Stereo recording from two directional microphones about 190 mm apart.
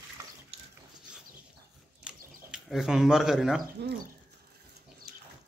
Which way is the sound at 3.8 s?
60° right (ahead or behind).